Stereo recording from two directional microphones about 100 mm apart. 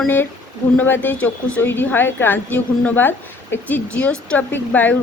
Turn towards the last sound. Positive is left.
turn(degrees=15)  # may be behind; listen again after turning